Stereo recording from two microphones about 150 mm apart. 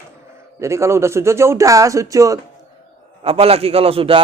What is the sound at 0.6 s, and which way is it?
A man's voice, 20° right (ahead or behind).